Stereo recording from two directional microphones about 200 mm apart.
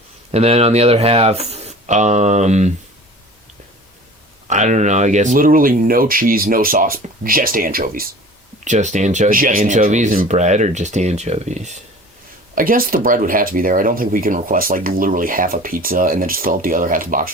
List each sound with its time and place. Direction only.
0.3 s speech: 30° right (ahead or behind)
4.4 s speech: 35° right (ahead or behind)